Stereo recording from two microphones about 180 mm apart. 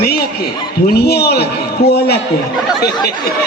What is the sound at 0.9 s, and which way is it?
Speech, 60° left (ahead or behind).